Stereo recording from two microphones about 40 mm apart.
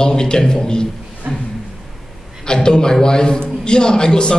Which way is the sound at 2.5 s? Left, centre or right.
Centre.